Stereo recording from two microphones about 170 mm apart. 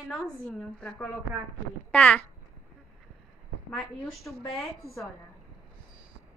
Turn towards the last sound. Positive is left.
turn(degrees=0)  # may be behind; listen again after turning